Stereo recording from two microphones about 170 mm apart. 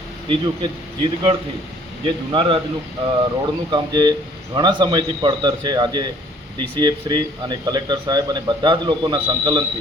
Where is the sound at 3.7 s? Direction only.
25° right (ahead or behind).